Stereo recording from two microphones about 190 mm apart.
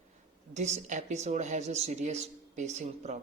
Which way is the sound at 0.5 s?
40° right (ahead or behind).